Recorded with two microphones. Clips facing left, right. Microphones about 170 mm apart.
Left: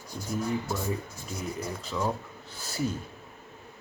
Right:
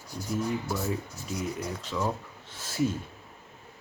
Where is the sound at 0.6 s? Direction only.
5° right (ahead or behind).